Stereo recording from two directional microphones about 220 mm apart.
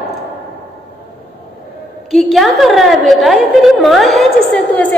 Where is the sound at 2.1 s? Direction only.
Centre (ahead or behind).